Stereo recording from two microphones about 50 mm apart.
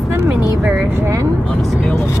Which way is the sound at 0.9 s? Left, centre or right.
Right.